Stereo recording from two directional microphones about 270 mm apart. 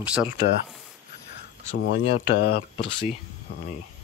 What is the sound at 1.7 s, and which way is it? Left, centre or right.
Speech, left.